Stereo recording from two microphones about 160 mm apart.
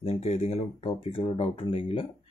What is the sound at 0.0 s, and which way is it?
Speech, 40° left (ahead or behind).